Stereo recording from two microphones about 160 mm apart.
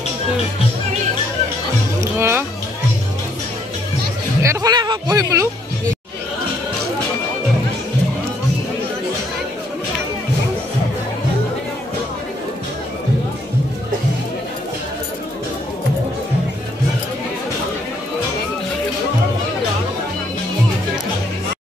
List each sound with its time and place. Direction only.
2.1 s music: 15° right (ahead or behind)
4.4 s speech: 20° right (ahead or behind)